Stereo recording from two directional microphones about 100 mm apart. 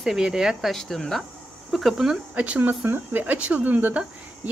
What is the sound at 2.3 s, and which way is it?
Speech, 15° right (ahead or behind).